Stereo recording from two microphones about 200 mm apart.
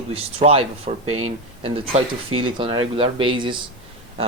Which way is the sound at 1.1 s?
90° right.